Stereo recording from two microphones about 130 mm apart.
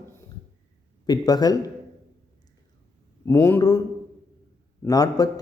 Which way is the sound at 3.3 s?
15° left (ahead or behind).